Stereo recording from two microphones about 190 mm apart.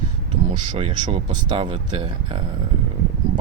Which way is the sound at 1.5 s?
30° right (ahead or behind).